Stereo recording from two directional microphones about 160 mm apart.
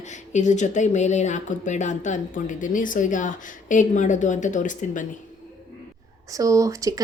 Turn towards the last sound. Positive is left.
turn(degrees=-20)  # may be behind; listen again after turning